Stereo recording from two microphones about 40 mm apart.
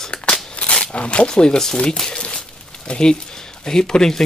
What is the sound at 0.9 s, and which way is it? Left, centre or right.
Speech, left.